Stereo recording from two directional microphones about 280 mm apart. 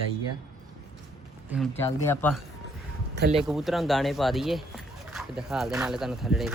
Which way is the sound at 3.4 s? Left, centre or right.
Centre.